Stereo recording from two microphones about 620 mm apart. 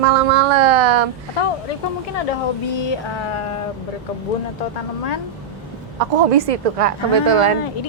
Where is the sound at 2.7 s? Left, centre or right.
Left.